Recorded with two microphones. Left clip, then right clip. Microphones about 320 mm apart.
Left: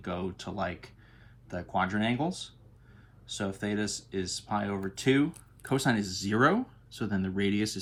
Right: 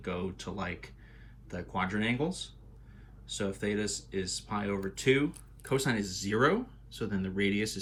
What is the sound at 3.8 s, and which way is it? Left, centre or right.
Speech, centre.